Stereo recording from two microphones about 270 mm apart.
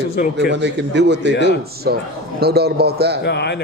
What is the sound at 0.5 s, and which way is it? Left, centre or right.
A man's voice, right.